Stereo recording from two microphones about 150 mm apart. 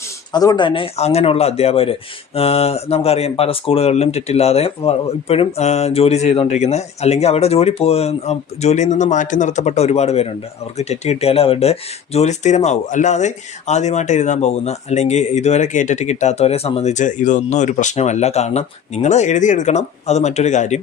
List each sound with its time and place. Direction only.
0.3 s speech: 30° left (ahead or behind); by 20.8 s 50° left (ahead or behind)